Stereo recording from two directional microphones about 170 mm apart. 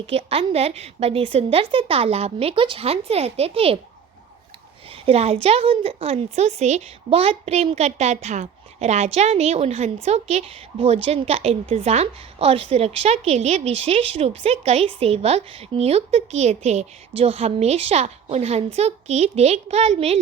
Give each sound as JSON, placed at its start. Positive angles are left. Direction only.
{"t": 0.1, "sound": "a woman's voice", "side_deg": -35}
{"t": 5.0, "sound": "a woman's voice", "side_deg": -35}